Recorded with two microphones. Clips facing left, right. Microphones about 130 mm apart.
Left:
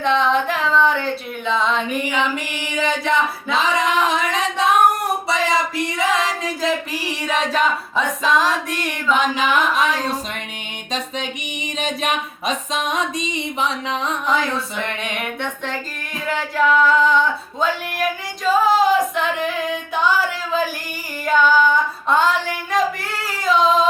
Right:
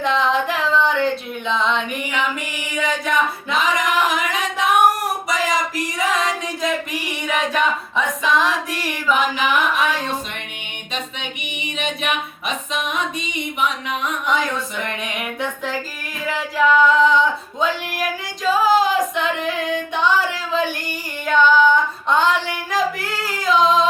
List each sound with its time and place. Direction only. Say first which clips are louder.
0.0 s female singing: left 1 dB; centre (ahead or behind)
2.0 s singing: left 2 dB; 25° left (ahead or behind)
4.0 s a sound: left 1 dB; 30° left (ahead or behind)
5.3 s music: left 1 dB; 25° left (ahead or behind)
9.0 s carnatic music: even; 10° right (ahead or behind)
9.3 s music: left 1 dB; 35° left (ahead or behind)
11.8 s music: left 1 dB; 35° left (ahead or behind)
15.1 s female singing: even; centre (ahead or behind)
16.2 s singing: even; centre (ahead or behind)
21.2 s female singing: right 1 dB; 5° left (ahead or behind)